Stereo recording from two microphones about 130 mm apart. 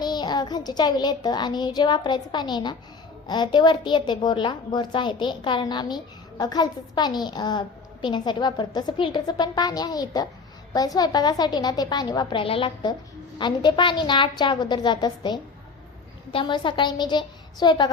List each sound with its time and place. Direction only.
0.0 s a woman's voice: 35° left (ahead or behind)